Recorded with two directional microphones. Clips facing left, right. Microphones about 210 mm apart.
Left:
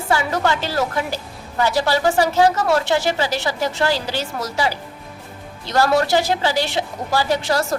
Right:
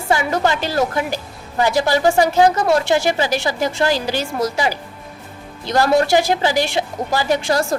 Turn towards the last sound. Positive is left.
turn(degrees=-15)  # may be behind; listen again after turning